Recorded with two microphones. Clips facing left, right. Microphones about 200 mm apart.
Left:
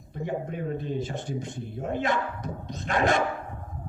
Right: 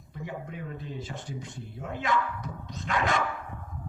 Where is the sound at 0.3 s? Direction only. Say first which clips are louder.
Left 10 dB; 40° left (ahead or behind).